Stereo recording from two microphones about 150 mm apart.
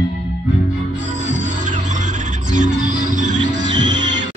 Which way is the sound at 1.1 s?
55° right (ahead or behind).